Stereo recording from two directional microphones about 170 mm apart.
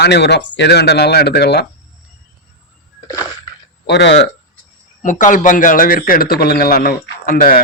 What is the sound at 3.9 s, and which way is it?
Speech, 90° left.